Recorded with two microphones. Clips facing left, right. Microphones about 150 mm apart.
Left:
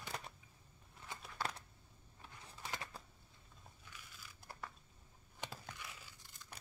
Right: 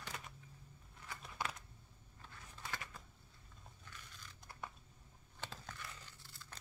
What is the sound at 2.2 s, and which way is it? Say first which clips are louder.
Typing: left 1 dB; 15° left (ahead or behind).